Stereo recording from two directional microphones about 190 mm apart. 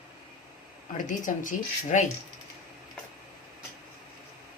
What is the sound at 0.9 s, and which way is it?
Speech, 40° left (ahead or behind).